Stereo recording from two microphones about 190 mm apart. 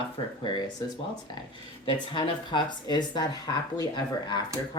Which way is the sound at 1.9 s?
25° left (ahead or behind).